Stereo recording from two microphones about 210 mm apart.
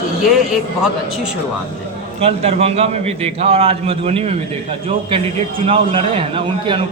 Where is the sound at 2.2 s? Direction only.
30° right (ahead or behind).